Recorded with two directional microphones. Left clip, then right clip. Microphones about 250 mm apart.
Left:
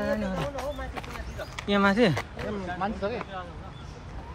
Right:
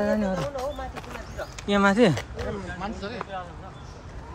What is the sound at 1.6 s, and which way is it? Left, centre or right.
Speech, centre.